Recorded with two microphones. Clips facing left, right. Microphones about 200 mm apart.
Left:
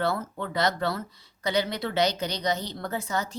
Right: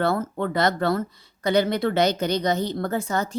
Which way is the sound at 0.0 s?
50° right (ahead or behind).